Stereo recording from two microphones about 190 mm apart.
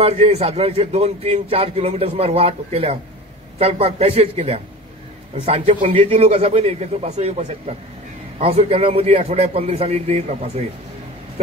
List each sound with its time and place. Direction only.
0.0 s a man's voice: 35° right (ahead or behind)